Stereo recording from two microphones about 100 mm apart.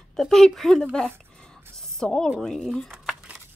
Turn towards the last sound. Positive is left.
turn(degrees=5)  # may be behind; listen again after turning